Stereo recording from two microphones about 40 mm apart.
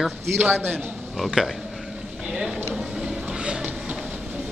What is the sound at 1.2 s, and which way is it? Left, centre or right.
Speech, centre.